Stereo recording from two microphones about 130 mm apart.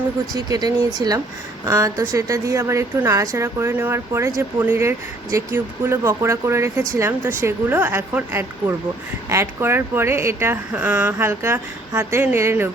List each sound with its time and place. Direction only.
0.3 s a woman's voice: 30° right (ahead or behind)